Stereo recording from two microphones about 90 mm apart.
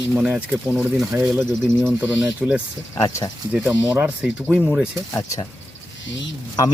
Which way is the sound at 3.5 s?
15° right (ahead or behind).